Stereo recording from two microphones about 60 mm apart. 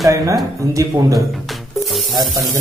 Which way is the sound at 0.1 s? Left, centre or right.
Right.